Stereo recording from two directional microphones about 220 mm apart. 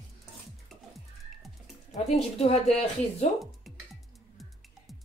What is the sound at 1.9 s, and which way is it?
Speech, 30° left (ahead or behind).